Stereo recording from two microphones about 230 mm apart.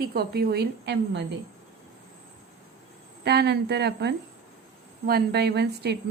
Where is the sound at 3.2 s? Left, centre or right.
Right.